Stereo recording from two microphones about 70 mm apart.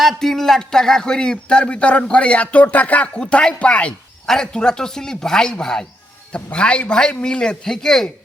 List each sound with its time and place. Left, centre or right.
0.0 s a man's voice: centre